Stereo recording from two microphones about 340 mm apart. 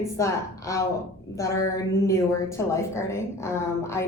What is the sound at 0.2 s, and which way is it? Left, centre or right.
A woman's voice, centre.